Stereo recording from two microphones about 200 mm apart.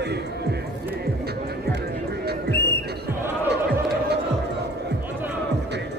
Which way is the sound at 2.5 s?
55° left (ahead or behind).